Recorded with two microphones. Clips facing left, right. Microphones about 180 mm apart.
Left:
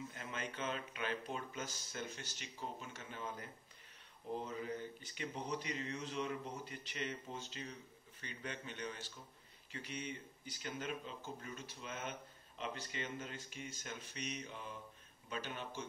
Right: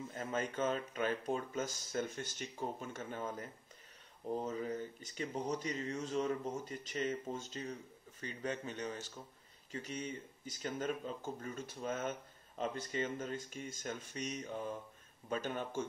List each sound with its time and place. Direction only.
0.2 s speech: 45° right (ahead or behind)
4.5 s speech: 40° right (ahead or behind)